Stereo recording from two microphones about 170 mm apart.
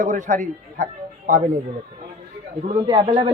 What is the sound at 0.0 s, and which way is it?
Speech, 45° right (ahead or behind).